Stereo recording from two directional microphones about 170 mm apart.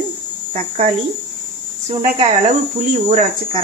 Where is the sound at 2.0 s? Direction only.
40° right (ahead or behind).